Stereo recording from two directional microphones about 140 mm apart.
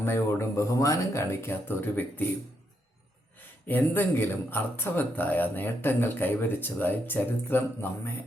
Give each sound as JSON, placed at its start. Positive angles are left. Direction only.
{"t": 0.0, "sound": "speech", "side_deg": 15}
{"t": 3.7, "sound": "speech", "side_deg": 15}